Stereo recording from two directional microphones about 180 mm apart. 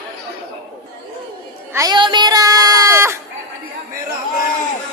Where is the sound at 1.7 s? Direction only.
20° right (ahead or behind).